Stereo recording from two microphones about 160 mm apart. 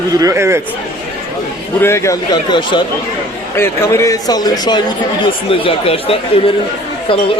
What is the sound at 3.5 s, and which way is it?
A man's voice, 15° left (ahead or behind).